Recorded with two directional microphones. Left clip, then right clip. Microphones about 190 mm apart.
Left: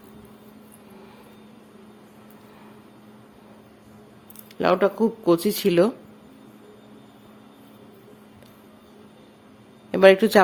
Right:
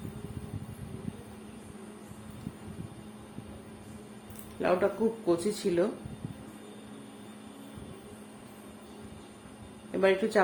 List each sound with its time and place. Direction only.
4.6 s speech: 45° left (ahead or behind)
9.9 s speech: 50° left (ahead or behind)